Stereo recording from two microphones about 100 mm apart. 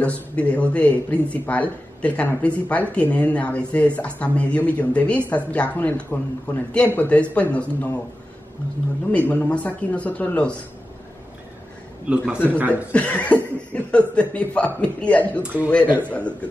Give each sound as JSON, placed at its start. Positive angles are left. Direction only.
{"t": 0.0, "sound": "speech", "side_deg": 15}
{"t": 9.3, "sound": "speech", "side_deg": 15}
{"t": 12.4, "sound": "a man's voice", "side_deg": -20}
{"t": 12.9, "sound": "speech", "side_deg": 15}
{"t": 15.4, "sound": "a man's voice", "side_deg": -15}
{"t": 16.1, "sound": "speech", "side_deg": 15}